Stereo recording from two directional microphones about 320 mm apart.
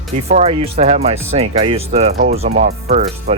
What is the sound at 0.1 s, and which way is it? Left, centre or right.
Speech, right.